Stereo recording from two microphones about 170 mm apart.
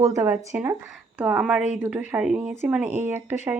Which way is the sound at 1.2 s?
5° right (ahead or behind).